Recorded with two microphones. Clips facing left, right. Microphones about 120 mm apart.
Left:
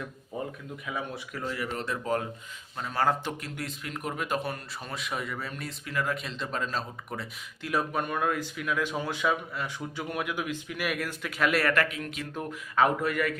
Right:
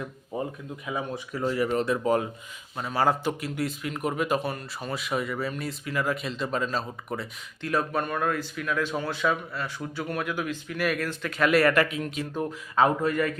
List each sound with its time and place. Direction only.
0.9 s speech: 15° right (ahead or behind)
1.5 s speech: 35° right (ahead or behind)
1.8 s speech: 15° right (ahead or behind)
7.7 s speech: 10° left (ahead or behind)
11.9 s speech: 25° right (ahead or behind)